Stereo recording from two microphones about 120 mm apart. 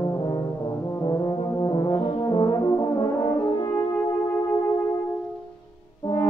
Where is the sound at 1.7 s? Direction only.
35° left (ahead or behind).